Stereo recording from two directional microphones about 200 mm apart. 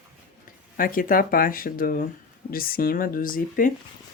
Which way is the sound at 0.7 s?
45° left (ahead or behind).